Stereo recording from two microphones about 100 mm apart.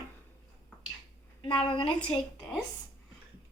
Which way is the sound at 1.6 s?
60° left (ahead or behind).